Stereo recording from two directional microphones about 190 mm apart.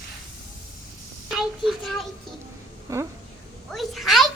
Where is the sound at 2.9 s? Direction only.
15° right (ahead or behind).